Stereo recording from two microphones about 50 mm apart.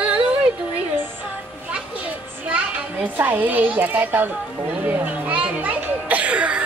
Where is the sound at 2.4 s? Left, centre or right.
Right.